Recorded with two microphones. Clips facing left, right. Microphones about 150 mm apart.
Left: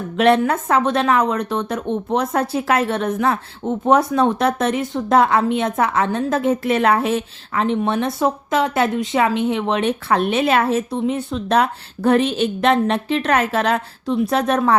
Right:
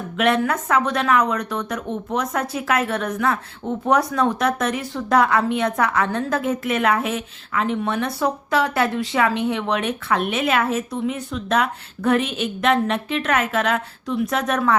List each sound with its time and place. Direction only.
0.2 s a woman's voice: 30° left (ahead or behind)